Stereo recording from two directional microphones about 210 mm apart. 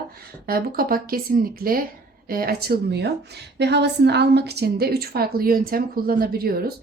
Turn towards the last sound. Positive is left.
turn(degrees=-45)  # may be behind; listen again after turning